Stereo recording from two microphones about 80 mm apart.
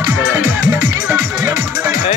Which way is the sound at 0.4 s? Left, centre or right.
Right.